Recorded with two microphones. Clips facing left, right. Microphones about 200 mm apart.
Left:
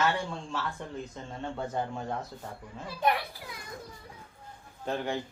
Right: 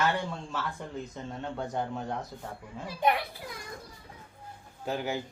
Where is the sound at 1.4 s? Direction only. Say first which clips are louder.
Left 1 dB; centre (ahead or behind).